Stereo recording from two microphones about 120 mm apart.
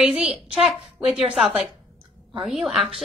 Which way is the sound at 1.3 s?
5° right (ahead or behind).